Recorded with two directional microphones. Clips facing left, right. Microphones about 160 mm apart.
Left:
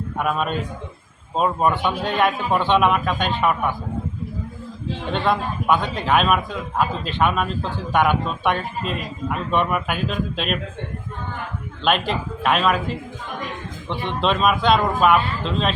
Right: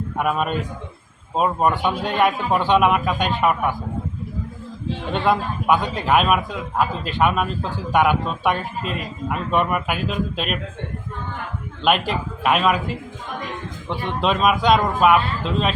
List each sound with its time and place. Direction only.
0.2 s a man's voice: 5° right (ahead or behind)
5.1 s a man's voice: 10° right (ahead or behind)
11.8 s a man's voice: 5° right (ahead or behind)
13.8 s a man's voice: 10° right (ahead or behind)